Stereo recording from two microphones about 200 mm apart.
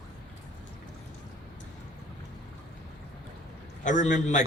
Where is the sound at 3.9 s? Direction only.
40° left (ahead or behind).